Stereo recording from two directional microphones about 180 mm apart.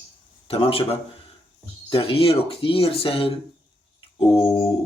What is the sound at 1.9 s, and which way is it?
Speech, 30° left (ahead or behind).